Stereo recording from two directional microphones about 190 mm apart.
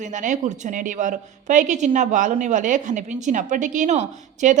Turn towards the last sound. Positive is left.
turn(degrees=-40)  # may be behind; listen again after turning